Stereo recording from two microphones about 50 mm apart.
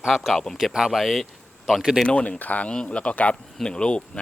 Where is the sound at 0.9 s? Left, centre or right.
Centre.